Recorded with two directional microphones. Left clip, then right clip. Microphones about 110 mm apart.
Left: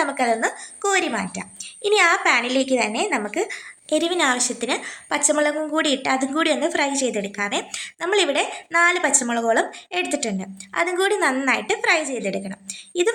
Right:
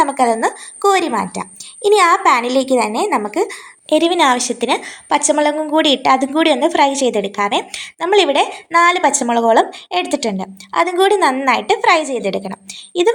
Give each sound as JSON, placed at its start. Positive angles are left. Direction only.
{"t": 0.0, "sound": "a woman's voice", "side_deg": -35}